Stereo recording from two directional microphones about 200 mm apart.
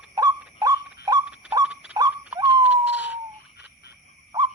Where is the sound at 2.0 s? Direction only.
20° right (ahead or behind).